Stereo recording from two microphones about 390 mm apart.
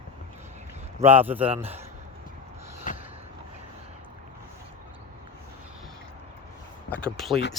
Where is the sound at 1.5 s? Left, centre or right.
Centre.